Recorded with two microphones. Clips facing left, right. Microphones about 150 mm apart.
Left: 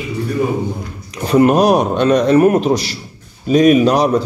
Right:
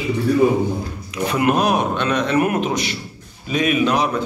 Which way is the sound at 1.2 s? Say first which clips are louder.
Left 7 dB; 35° left (ahead or behind).